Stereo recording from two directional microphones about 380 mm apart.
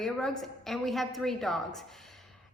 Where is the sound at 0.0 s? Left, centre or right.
Centre.